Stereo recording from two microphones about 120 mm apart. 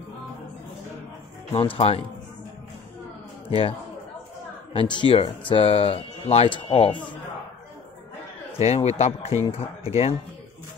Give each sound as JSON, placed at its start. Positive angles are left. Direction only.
{"t": 1.5, "sound": "speech", "side_deg": 50}
{"t": 3.4, "sound": "a man's voice", "side_deg": 50}
{"t": 4.7, "sound": "speech", "side_deg": 45}
{"t": 8.5, "sound": "speech", "side_deg": 65}